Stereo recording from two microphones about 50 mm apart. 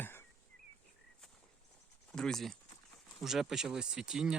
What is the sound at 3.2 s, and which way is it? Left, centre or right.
Speech, centre.